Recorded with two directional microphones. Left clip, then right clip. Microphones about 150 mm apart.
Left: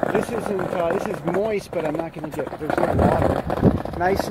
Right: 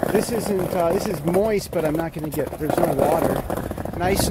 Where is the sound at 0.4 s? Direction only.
10° right (ahead or behind).